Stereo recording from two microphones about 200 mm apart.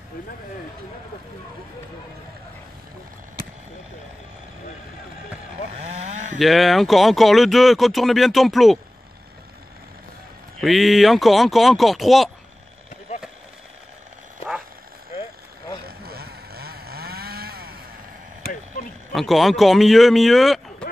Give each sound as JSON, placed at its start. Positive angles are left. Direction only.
{"t": 6.3, "sound": "speech", "side_deg": 0}
{"t": 10.6, "sound": "speech", "side_deg": 0}
{"t": 15.8, "sound": "vehicle", "side_deg": -50}
{"t": 19.1, "sound": "speech", "side_deg": 0}